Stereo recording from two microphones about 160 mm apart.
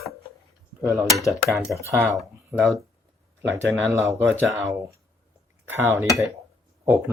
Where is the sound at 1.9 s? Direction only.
15° right (ahead or behind).